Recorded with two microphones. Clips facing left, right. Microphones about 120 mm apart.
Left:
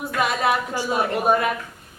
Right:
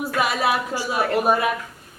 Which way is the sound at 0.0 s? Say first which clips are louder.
Even; 5° right (ahead or behind).